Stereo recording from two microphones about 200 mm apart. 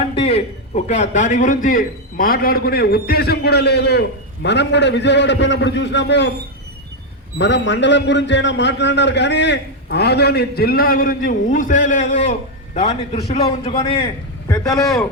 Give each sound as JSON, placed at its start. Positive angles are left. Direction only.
{"t": 0.2, "sound": "a sound", "side_deg": 30}
{"t": 0.9, "sound": "a man's voice", "side_deg": 35}
{"t": 7.3, "sound": "a man's voice", "side_deg": 65}
{"t": 14.0, "sound": "a man's voice", "side_deg": 15}